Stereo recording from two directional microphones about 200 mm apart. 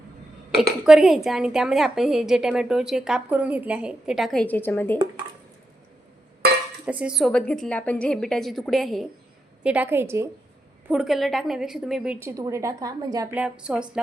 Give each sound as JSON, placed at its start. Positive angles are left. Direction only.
{"t": 0.5, "sound": "a woman's voice", "side_deg": 0}
{"t": 6.4, "sound": "dishes", "side_deg": -50}
{"t": 6.8, "sound": "a woman's voice", "side_deg": -5}
{"t": 13.3, "sound": "a woman's voice", "side_deg": -5}